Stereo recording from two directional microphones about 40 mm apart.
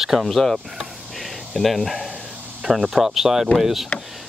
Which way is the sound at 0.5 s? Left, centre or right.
Centre.